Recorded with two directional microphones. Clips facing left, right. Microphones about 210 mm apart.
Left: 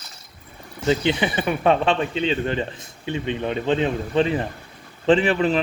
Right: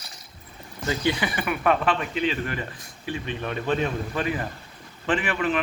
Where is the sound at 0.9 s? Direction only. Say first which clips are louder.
Left 5 dB; 20° left (ahead or behind).